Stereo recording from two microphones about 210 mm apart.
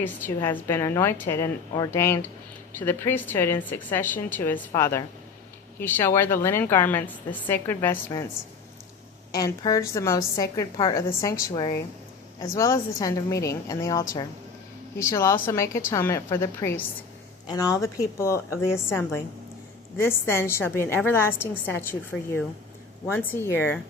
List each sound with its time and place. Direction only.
0.3 s a woman's voice: 10° left (ahead or behind)
9.3 s a woman's voice: 15° left (ahead or behind)